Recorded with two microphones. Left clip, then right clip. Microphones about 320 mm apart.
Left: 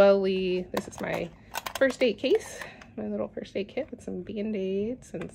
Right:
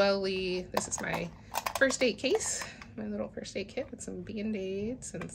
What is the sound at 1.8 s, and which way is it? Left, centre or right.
Speech, centre.